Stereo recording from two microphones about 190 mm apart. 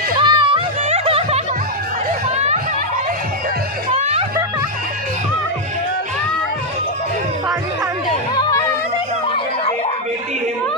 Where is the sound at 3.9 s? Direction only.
35° right (ahead or behind).